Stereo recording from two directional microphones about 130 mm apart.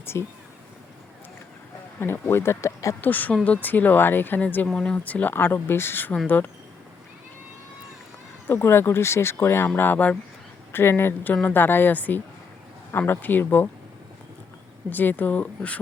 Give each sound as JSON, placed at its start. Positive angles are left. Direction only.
{"t": 0.0, "sound": "speech", "side_deg": 20}
{"t": 2.0, "sound": "speech", "side_deg": 15}
{"t": 8.4, "sound": "speech", "side_deg": 20}
{"t": 14.8, "sound": "speech", "side_deg": 15}